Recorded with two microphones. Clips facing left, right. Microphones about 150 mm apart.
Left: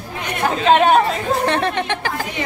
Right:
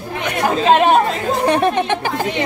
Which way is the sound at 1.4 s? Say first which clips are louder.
Right 4 dB; 15° right (ahead or behind).